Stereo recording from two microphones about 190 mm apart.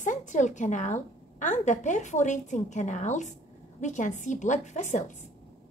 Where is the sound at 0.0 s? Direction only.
40° left (ahead or behind).